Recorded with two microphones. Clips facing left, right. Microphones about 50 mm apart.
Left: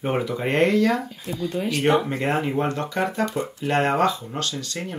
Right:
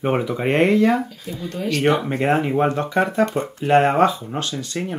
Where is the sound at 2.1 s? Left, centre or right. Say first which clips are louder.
Right 4 dB; right.